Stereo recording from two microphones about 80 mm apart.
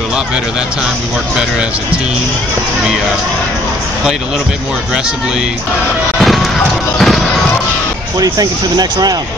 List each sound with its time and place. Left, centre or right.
6.1 s music: centre
8.2 s speech: right